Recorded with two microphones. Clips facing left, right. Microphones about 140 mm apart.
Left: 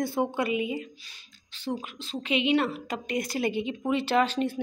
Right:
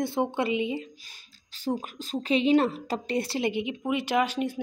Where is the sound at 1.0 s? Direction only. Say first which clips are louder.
Even; 40° right (ahead or behind).